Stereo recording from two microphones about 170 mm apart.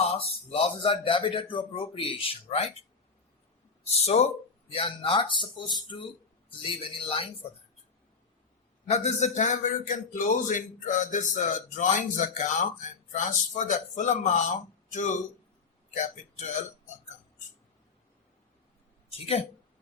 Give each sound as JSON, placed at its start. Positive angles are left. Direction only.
{"t": 0.2, "sound": "speech", "side_deg": 35}
{"t": 3.8, "sound": "speech", "side_deg": 40}
{"t": 8.9, "sound": "a man's voice", "side_deg": 45}
{"t": 19.1, "sound": "speech", "side_deg": 35}